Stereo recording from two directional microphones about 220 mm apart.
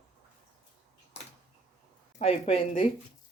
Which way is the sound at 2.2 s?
25° left (ahead or behind).